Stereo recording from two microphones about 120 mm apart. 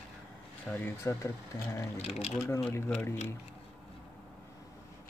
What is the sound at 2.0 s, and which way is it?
Speech, 60° left (ahead or behind).